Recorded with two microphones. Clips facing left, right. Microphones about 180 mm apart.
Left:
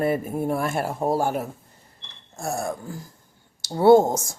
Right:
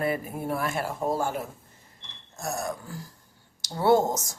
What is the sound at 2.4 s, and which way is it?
Speech, 30° left (ahead or behind).